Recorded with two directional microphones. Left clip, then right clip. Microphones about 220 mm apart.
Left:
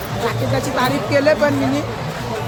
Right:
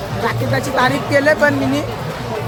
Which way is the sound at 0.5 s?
15° right (ahead or behind).